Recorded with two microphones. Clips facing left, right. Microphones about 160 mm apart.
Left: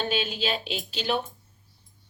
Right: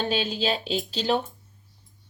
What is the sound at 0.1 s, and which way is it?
Speech, 35° right (ahead or behind).